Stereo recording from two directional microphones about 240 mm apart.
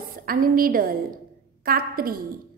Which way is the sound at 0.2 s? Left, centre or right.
Right.